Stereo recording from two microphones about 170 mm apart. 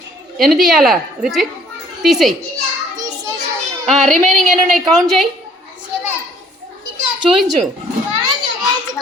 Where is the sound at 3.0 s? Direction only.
20° right (ahead or behind).